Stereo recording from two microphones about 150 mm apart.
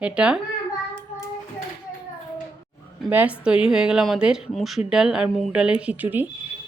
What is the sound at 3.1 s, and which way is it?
A woman's voice, 10° right (ahead or behind).